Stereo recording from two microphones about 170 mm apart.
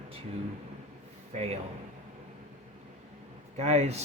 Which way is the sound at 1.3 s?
40° right (ahead or behind).